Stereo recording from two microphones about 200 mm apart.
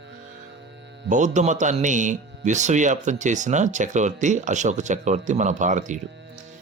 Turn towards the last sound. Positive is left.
turn(degrees=-40)  # may be behind; listen again after turning